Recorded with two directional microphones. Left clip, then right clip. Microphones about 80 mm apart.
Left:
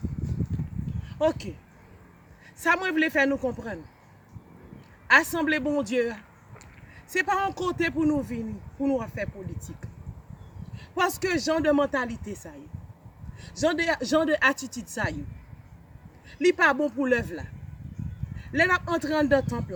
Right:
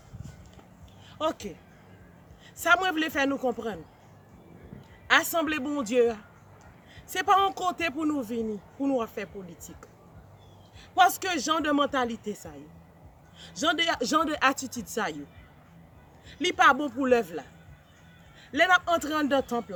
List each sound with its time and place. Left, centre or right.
1.3 s speech: right
2.6 s speech: right
5.1 s speech: right
10.8 s speech: right
13.4 s speech: right
16.6 s speech: right
18.5 s speech: right